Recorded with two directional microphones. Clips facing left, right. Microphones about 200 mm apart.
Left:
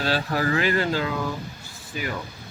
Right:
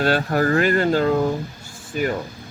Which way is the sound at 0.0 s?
50° right (ahead or behind).